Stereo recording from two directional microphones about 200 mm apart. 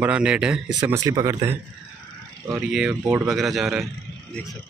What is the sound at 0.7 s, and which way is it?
Speech, 15° right (ahead or behind).